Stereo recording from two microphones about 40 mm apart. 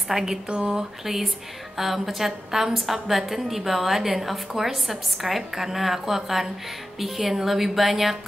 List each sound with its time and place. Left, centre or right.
0.1 s speech: centre
1.0 s a woman's voice: centre